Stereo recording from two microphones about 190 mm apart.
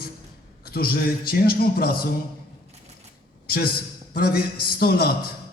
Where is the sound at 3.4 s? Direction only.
50° left (ahead or behind).